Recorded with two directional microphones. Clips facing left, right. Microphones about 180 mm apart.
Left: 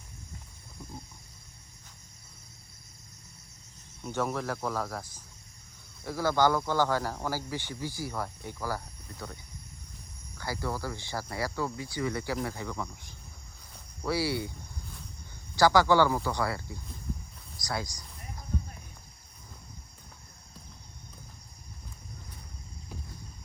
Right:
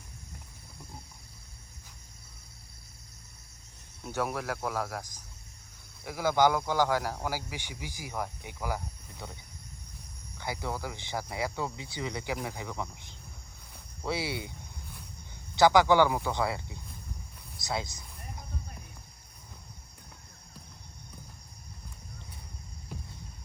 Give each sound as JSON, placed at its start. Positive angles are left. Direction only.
{"t": 4.0, "sound": "speech", "side_deg": -10}
{"t": 10.3, "sound": "speech", "side_deg": -20}
{"t": 15.5, "sound": "speech", "side_deg": -20}